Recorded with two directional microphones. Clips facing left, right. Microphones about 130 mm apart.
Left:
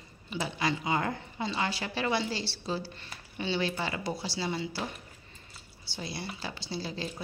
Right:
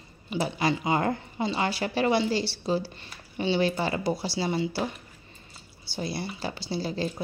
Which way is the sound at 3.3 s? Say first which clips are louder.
Right 6 dB; 35° right (ahead or behind).